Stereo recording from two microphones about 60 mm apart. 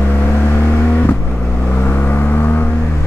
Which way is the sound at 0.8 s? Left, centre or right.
Left.